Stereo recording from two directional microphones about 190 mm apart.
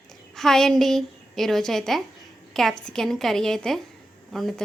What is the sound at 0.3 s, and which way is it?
A woman's voice, centre (ahead or behind).